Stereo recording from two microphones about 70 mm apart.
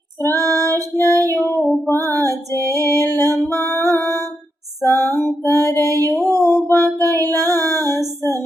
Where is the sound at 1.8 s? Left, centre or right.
Left.